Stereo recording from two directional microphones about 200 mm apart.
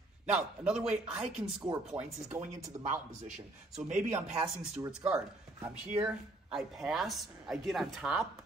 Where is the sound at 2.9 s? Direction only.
35° right (ahead or behind).